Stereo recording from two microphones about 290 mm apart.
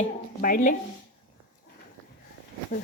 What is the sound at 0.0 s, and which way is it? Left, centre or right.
Speech, left.